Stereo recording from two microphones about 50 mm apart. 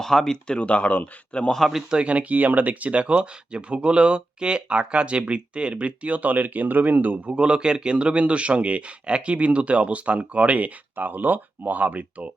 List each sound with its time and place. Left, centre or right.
0.0 s speech: centre
1.5 s speech: centre
1.9 s speech: right
7.3 s speech: centre